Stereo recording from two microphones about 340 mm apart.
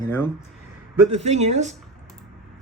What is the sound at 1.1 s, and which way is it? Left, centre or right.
Speech, centre.